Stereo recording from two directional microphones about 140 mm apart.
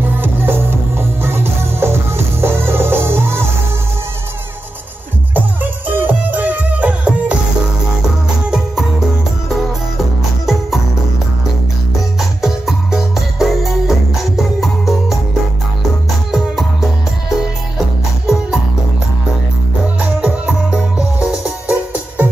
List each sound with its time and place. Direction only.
0.0 s music: 15° right (ahead or behind)
5.3 s music: 10° right (ahead or behind)
8.5 s music: 5° right (ahead or behind)
10.4 s music: centre (ahead or behind)
12.2 s music: centre (ahead or behind)
17.7 s music: centre (ahead or behind)
20.0 s music: 10° right (ahead or behind)